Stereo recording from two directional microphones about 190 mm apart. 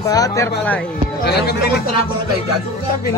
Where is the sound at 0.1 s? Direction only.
20° left (ahead or behind).